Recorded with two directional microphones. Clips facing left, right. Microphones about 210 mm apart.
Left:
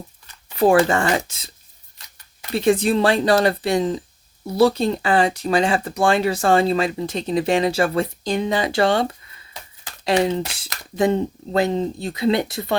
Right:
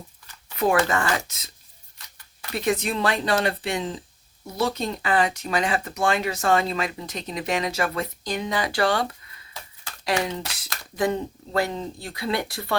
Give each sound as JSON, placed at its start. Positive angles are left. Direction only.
{"t": 0.5, "sound": "speech", "side_deg": 30}